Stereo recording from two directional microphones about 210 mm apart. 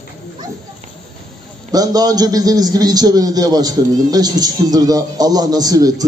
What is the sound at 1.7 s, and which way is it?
A man's voice, 20° right (ahead or behind).